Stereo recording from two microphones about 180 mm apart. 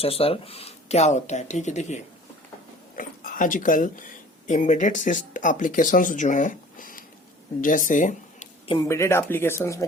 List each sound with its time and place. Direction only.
0.0 s speech: 35° left (ahead or behind)
8.7 s speech: 20° left (ahead or behind)